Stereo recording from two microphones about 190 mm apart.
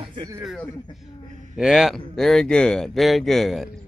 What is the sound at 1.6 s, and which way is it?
Speech, 5° right (ahead or behind).